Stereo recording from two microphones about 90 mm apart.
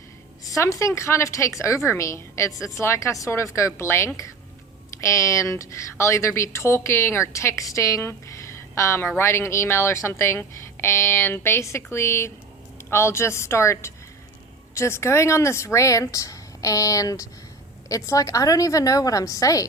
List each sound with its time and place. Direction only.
0.4 s speech: 35° left (ahead or behind)